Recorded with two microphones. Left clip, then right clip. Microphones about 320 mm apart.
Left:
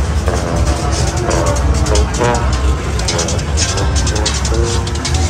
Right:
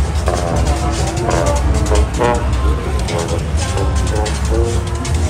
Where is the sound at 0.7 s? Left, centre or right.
Right.